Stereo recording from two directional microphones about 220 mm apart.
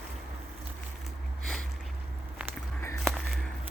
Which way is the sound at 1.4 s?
Centre (ahead or behind).